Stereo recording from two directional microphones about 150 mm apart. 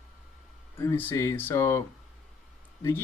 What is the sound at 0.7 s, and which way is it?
Speech, 15° left (ahead or behind).